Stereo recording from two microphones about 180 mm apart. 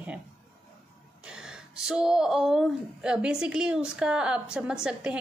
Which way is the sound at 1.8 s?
5° right (ahead or behind).